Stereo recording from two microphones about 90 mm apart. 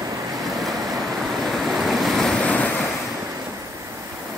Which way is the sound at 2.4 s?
15° left (ahead or behind).